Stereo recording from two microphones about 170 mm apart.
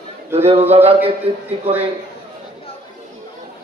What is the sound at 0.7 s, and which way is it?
Speech, 35° right (ahead or behind).